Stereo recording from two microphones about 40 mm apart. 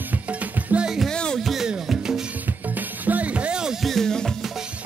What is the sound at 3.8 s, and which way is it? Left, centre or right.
Music, centre.